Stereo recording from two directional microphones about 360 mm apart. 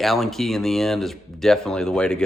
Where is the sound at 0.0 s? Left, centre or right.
Centre.